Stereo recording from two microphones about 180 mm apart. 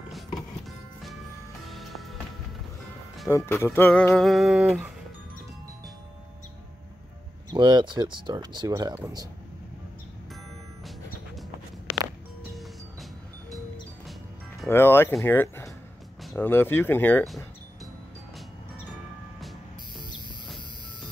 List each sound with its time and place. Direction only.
1.7 s music: centre (ahead or behind)
3.3 s music: 15° left (ahead or behind); by 4.9 s 5° right (ahead or behind)
7.5 s speech: 25° right (ahead or behind)
14.7 s music: 15° left (ahead or behind)